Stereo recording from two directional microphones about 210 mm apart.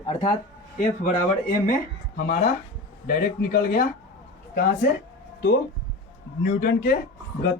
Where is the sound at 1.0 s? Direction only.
40° left (ahead or behind).